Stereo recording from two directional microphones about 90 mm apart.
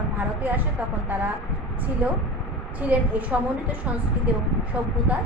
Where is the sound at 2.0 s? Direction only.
20° right (ahead or behind).